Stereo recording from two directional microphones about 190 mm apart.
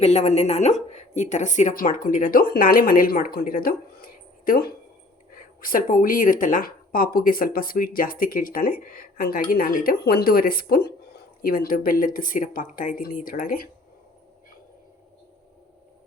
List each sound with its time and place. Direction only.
0.0 s speech: 35° left (ahead or behind)